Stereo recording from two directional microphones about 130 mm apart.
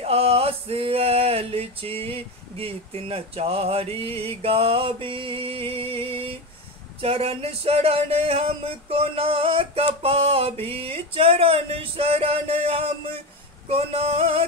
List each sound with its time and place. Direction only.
0.0 s male singing: 50° right (ahead or behind)